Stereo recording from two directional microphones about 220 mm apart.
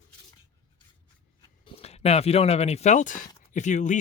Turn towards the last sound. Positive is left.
turn(degrees=35)  # may be behind; listen again after turning